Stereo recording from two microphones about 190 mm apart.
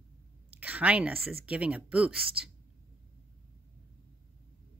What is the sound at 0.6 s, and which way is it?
A woman's voice, 10° right (ahead or behind).